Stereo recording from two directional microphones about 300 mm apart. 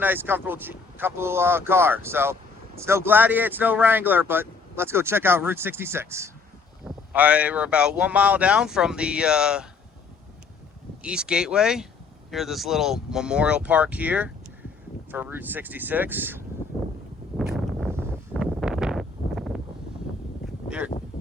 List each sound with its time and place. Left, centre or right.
0.0 s speech: centre
11.0 s speech: centre
17.3 s a sound: centre
20.7 s speech: centre